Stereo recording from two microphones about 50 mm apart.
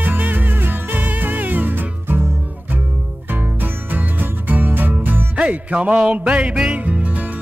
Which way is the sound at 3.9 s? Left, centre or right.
Right.